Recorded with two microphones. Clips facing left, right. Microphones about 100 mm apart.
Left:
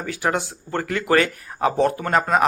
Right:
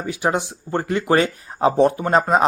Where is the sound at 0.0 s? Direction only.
20° right (ahead or behind).